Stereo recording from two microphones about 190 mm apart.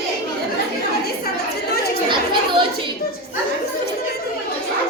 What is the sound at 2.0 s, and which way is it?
Children playing, 25° right (ahead or behind).